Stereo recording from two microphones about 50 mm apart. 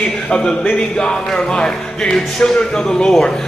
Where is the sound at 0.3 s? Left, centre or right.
Centre.